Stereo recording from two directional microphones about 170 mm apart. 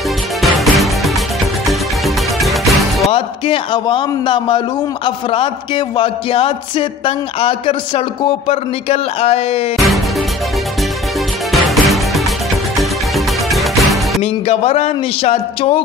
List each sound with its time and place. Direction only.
0.4 s music: centre (ahead or behind)
3.1 s a man's voice: 35° left (ahead or behind)
9.8 s music: centre (ahead or behind)
11.5 s music: centre (ahead or behind)
14.2 s a man's voice: 35° left (ahead or behind)